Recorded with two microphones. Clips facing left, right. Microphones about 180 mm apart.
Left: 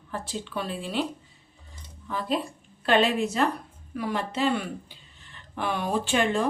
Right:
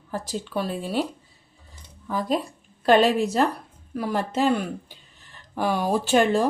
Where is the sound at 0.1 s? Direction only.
40° right (ahead or behind).